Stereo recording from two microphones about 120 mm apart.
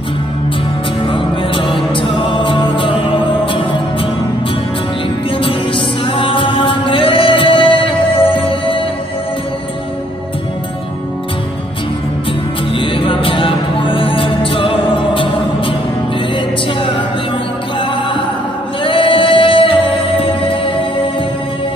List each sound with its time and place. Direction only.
1.0 s music: 45° left (ahead or behind)
5.4 s music: 45° left (ahead or behind)
12.7 s music: 45° left (ahead or behind)
18.9 s music: 45° left (ahead or behind)